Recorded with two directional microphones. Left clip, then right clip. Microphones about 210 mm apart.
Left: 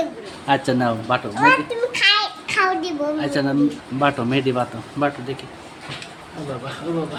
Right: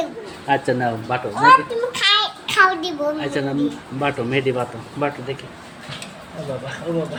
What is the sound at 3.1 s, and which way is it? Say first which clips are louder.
Speech: left 2 dB; 25° left (ahead or behind).